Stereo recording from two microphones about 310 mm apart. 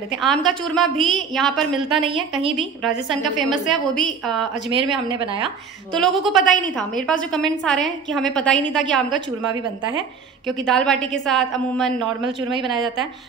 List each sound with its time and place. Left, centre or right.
0.2 s a woman's voice: centre
4.6 s a woman's voice: centre
5.9 s a woman's voice: centre
9.1 s a woman's voice: centre
10.4 s a woman's voice: centre